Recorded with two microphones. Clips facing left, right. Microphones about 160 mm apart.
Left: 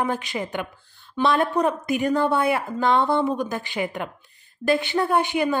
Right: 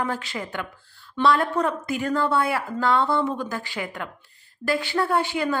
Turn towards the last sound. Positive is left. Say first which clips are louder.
# left 2 dB
turn(degrees=20)  # may be behind; listen again after turning